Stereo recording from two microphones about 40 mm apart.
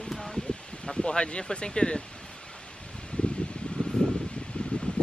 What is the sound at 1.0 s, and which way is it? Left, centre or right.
Speech, left.